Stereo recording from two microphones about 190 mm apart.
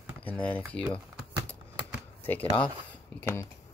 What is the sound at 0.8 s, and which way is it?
Typing, 10° right (ahead or behind).